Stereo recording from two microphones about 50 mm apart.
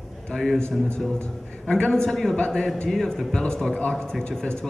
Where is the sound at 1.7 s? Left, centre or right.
Centre.